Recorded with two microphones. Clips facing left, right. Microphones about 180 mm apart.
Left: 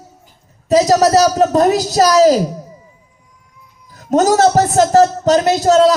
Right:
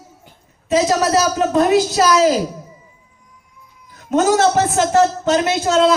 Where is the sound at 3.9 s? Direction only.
40° left (ahead or behind).